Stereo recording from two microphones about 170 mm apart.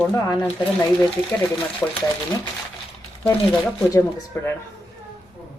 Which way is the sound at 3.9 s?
15° left (ahead or behind).